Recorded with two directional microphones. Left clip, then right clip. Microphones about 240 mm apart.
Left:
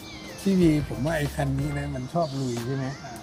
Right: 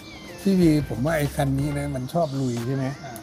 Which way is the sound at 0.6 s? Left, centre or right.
Right.